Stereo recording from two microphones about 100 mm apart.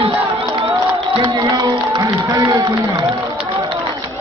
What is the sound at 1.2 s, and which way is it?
Music, 50° right (ahead or behind).